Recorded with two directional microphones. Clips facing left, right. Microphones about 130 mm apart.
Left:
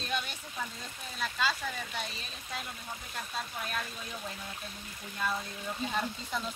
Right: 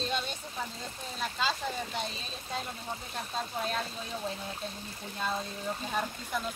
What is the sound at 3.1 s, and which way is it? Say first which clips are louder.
Speech: right 2 dB; 30° right (ahead or behind).